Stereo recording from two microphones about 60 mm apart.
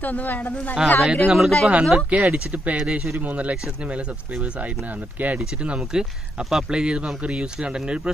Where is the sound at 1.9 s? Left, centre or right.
Right.